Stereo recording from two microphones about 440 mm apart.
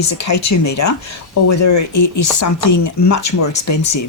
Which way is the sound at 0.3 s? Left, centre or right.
Left.